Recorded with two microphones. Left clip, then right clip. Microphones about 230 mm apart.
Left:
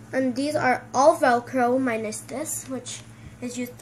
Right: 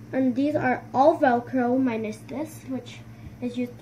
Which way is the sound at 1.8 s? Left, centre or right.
Centre.